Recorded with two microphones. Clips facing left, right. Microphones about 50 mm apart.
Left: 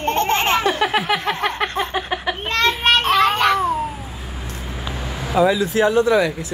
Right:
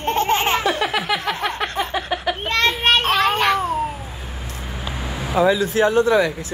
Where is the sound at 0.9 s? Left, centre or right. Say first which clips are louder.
Left 2 dB; left.